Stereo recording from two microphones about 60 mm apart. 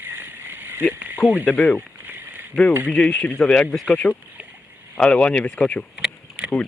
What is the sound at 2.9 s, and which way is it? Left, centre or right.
Speech, centre.